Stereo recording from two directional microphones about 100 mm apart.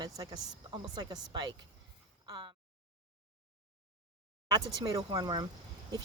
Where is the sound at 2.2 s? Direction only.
50° right (ahead or behind).